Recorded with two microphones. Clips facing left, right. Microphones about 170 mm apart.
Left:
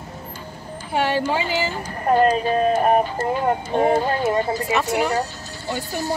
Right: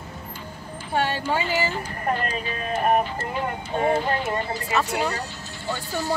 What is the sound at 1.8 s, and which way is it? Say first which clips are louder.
Speech: left 8 dB; 40° left (ahead or behind).